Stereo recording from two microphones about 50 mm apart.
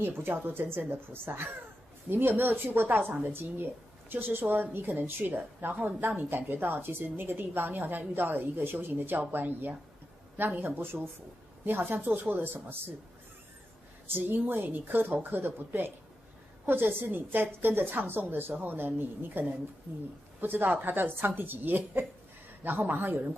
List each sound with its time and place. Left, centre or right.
0.0 s a woman's voice: right
14.2 s a woman's voice: right